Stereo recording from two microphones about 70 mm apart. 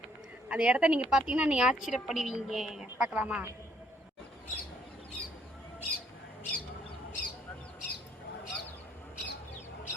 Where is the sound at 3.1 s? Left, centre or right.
Centre.